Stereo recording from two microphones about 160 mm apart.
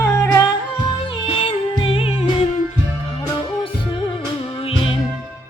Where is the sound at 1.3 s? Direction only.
35° left (ahead or behind).